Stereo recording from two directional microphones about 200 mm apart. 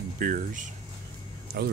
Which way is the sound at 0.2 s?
40° right (ahead or behind).